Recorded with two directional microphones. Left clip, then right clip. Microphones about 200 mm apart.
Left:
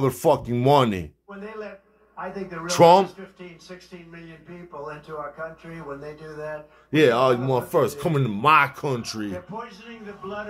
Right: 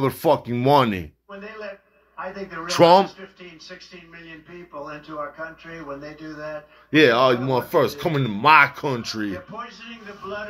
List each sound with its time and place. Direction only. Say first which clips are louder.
0.0 s speech: right 1 dB; 15° left (ahead or behind)
2.6 s speech: even; 15° left (ahead or behind)
6.9 s speech: right 2 dB; 10° left (ahead or behind)